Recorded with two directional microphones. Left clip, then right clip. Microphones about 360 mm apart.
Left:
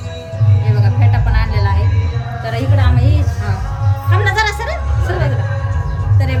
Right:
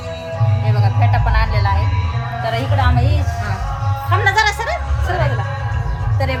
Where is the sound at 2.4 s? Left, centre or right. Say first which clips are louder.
Right 2 dB; centre.